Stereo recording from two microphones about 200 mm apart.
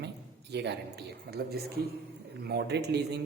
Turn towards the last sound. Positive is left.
turn(degrees=-55)  # may be behind; listen again after turning